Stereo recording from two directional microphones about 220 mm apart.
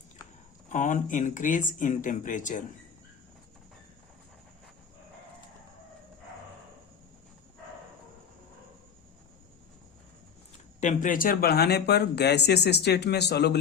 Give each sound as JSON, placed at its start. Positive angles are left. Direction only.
{"t": 0.7, "sound": "speech", "side_deg": 35}
{"t": 10.8, "sound": "speech", "side_deg": 35}